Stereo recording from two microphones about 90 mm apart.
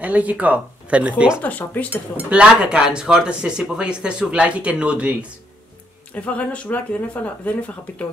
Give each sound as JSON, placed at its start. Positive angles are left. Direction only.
{"t": 0.0, "sound": "speech", "side_deg": -15}
{"t": 1.4, "sound": "speech", "side_deg": 20}
{"t": 2.1, "sound": "speech", "side_deg": -15}
{"t": 6.1, "sound": "speech", "side_deg": 15}